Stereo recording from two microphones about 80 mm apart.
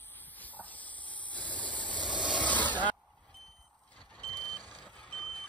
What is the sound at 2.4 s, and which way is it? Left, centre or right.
Snake, left.